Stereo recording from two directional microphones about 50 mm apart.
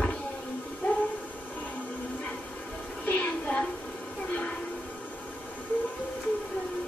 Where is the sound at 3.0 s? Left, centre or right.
Left.